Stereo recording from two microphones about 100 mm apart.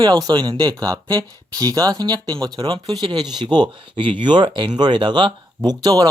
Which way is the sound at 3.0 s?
50° right (ahead or behind).